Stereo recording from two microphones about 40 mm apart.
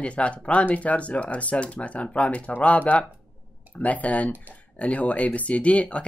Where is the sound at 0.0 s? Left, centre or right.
Left.